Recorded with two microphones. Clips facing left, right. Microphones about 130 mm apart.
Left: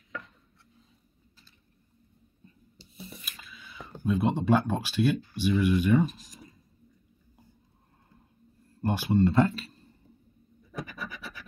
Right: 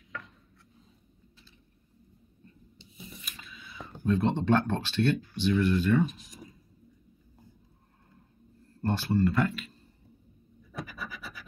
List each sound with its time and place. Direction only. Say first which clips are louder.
3.3 s speech: even; centre (ahead or behind)
6.0 s a sound: left 1 dB; centre (ahead or behind)
8.8 s speech: left 2 dB; 15° left (ahead or behind)
9.2 s speech: left 6 dB; 30° left (ahead or behind)
10.8 s scratch: left 1 dB; centre (ahead or behind)